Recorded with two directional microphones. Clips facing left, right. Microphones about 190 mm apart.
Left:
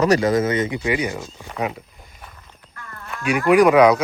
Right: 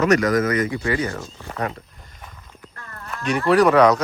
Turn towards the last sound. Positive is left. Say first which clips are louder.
# left 2 dB
turn(degrees=10)  # may be behind; listen again after turning